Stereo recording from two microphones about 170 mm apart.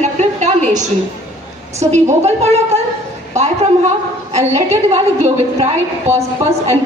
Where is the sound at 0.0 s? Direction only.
45° right (ahead or behind).